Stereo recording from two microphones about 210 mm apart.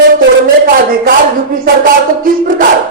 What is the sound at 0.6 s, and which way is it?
A woman's voice, 45° right (ahead or behind).